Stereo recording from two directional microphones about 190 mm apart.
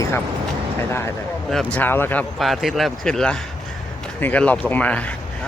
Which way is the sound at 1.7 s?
10° left (ahead or behind).